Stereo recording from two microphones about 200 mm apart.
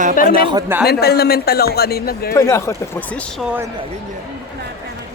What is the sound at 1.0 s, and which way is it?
A man's voice, 50° left (ahead or behind).